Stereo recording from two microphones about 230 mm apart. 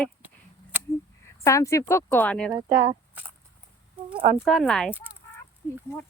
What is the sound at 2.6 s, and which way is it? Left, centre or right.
Speech, right.